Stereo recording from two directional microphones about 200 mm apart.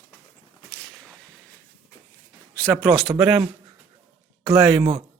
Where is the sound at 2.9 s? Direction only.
Centre (ahead or behind).